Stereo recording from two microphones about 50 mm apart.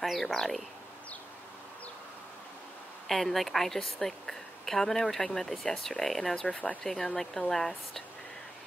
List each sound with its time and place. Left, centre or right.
0.0 s speech: centre
3.1 s a woman's voice: centre
6.4 s speech: left
6.8 s speech: centre